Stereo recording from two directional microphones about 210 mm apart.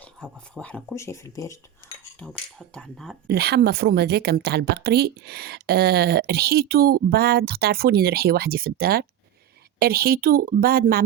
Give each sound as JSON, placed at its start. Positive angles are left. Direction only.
{"t": 0.0, "sound": "speech", "side_deg": 5}
{"t": 2.1, "sound": "speech", "side_deg": 5}
{"t": 3.2, "sound": "a woman's voice", "side_deg": -50}